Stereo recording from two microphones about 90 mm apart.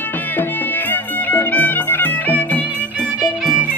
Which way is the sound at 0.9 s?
20° left (ahead or behind).